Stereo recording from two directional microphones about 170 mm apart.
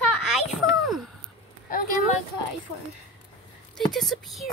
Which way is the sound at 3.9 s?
Centre (ahead or behind).